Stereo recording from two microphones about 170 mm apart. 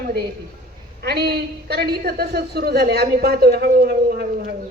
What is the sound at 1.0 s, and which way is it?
A woman's voice, 70° right (ahead or behind).